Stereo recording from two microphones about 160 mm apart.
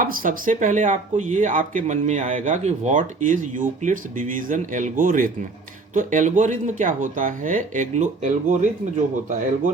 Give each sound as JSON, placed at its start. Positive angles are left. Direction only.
{"t": 0.0, "sound": "speech", "side_deg": -60}